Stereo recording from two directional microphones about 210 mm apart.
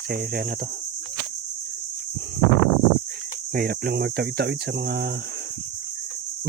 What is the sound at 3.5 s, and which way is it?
Speech, 45° right (ahead or behind).